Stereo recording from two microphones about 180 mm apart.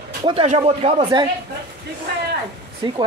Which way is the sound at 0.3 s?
35° right (ahead or behind).